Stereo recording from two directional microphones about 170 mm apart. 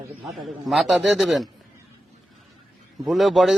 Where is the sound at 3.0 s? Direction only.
Centre (ahead or behind).